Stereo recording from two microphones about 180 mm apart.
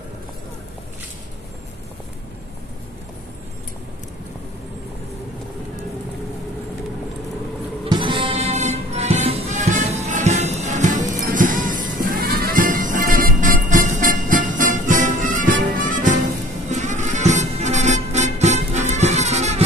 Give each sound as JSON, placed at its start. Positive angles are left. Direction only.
{"t": 7.8, "sound": "music", "side_deg": -25}